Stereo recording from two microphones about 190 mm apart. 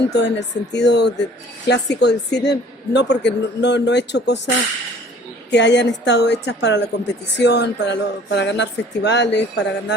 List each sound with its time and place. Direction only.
0.2 s speech: 65° left (ahead or behind)